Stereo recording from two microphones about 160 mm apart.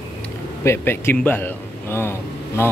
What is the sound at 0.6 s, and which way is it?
A man's voice, 15° left (ahead or behind).